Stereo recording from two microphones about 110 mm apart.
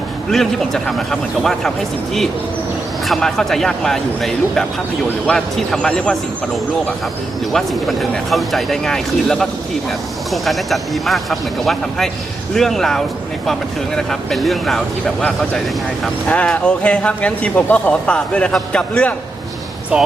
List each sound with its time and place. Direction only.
0.3 s speech: 5° left (ahead or behind)
3.1 s speech: 5° left (ahead or behind)
7.5 s speech: centre (ahead or behind)
19.9 s speech: 10° right (ahead or behind)